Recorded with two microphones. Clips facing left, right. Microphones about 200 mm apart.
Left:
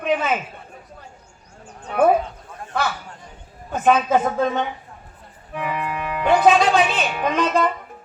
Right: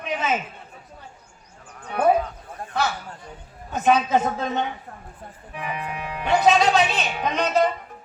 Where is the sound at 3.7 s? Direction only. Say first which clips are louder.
Left 2 dB; 55° left (ahead or behind).